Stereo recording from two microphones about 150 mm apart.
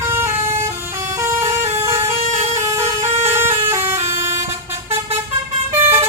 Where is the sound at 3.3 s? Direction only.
15° right (ahead or behind).